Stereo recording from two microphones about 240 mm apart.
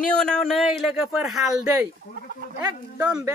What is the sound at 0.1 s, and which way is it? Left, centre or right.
Speech, centre.